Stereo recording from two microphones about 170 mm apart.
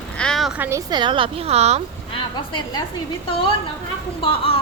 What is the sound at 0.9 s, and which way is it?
Speech, 30° right (ahead or behind).